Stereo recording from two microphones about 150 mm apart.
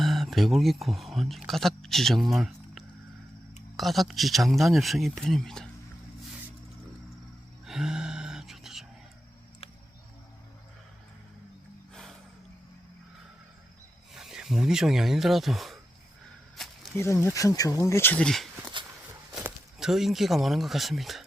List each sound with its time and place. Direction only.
0.0 s speech: centre (ahead or behind)
7.6 s a sound: 5° right (ahead or behind)
14.1 s speech: 5° right (ahead or behind)
17.0 s speech: 20° left (ahead or behind)
19.4 s speech: 5° right (ahead or behind)